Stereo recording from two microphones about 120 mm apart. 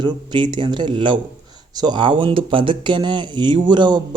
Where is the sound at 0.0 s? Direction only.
40° right (ahead or behind).